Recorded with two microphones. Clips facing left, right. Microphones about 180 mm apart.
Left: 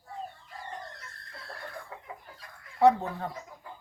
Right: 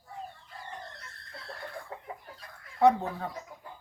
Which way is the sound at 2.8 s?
Centre (ahead or behind).